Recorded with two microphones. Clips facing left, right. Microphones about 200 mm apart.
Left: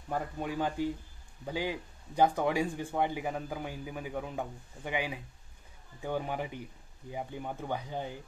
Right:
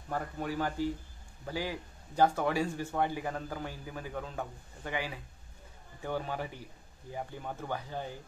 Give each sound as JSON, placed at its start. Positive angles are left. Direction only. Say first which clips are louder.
{"t": 0.1, "sound": "speech", "louder": "left 1 dB", "side_deg": 15}